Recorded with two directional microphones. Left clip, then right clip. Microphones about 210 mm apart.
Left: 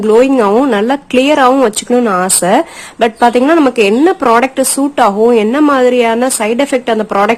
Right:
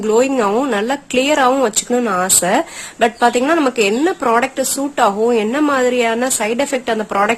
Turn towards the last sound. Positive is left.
turn(degrees=5)  # may be behind; listen again after turning